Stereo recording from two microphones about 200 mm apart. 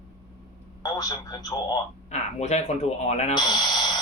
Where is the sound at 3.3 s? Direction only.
20° left (ahead or behind).